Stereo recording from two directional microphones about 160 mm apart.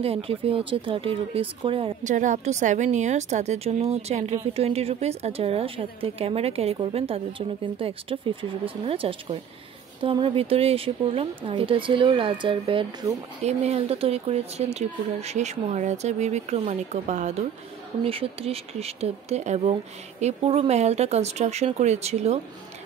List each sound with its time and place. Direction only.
0.0 s a woman's voice: 35° right (ahead or behind)
2.0 s a woman's voice: 50° right (ahead or behind)
18.0 s speech: 35° right (ahead or behind)